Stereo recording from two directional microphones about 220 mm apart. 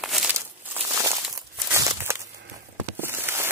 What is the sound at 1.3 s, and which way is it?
Walk, 15° right (ahead or behind).